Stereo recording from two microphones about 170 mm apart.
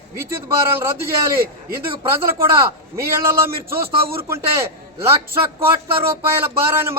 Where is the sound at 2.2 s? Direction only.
15° right (ahead or behind).